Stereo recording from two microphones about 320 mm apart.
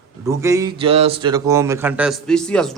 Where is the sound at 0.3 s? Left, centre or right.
Centre.